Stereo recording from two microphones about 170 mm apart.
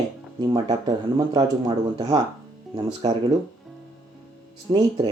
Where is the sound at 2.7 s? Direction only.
35° right (ahead or behind).